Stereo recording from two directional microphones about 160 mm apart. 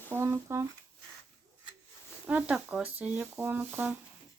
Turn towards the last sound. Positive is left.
turn(degrees=-10)  # may be behind; listen again after turning